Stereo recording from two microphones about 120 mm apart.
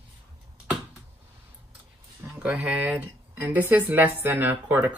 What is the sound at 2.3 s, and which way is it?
Speech, 10° right (ahead or behind).